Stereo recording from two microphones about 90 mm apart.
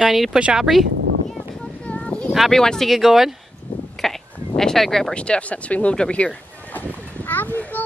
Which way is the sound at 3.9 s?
5° left (ahead or behind).